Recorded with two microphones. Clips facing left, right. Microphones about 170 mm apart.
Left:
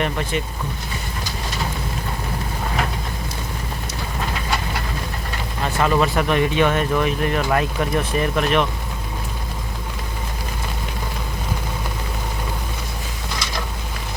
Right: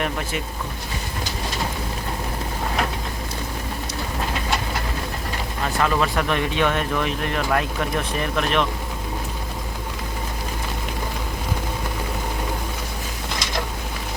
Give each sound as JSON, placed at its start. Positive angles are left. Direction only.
{"t": 0.0, "sound": "speech", "side_deg": -5}
{"t": 5.8, "sound": "speech", "side_deg": 5}